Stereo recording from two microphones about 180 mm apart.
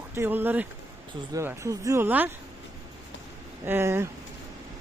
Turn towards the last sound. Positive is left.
turn(degrees=-15)  # may be behind; listen again after turning